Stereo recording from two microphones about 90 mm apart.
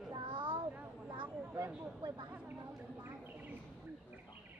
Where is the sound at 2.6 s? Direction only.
35° right (ahead or behind).